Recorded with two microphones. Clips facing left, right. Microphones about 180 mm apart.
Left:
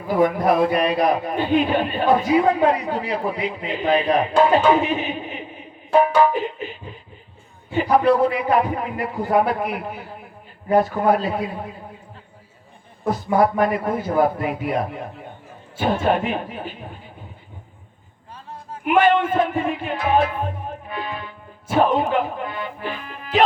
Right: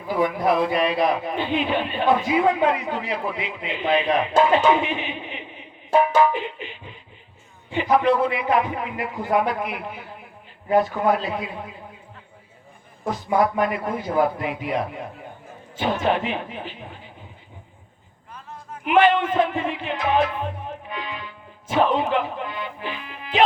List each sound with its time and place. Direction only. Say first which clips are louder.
0.1 s a man's voice: left 3 dB; 45° left (ahead or behind)
13.1 s a man's voice: left 3 dB; 45° left (ahead or behind)
16.0 s a man's voice: left 2 dB; 45° left (ahead or behind)
18.3 s a sound: left 2 dB; 30° left (ahead or behind)
18.9 s music: left 1 dB; 45° left (ahead or behind)